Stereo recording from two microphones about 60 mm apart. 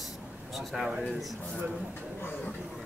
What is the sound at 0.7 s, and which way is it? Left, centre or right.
Speech, centre.